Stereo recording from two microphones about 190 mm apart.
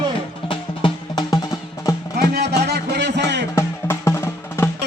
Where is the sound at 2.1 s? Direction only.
55° right (ahead or behind).